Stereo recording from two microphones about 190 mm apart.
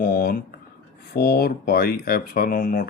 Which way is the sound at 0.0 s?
50° left (ahead or behind).